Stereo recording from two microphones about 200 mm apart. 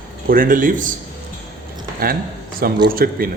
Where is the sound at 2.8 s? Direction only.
50° right (ahead or behind).